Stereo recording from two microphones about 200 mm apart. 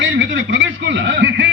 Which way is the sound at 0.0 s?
65° right (ahead or behind).